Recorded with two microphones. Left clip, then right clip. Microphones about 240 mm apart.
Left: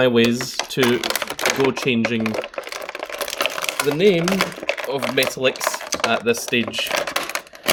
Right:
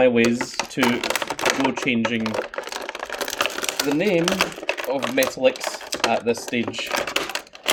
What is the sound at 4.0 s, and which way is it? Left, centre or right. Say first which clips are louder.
Speech: left 5 dB; left.